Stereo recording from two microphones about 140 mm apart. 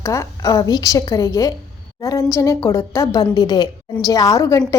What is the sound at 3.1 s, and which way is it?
A woman's voice, 30° left (ahead or behind).